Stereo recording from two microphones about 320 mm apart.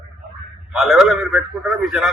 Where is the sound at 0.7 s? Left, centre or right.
Centre.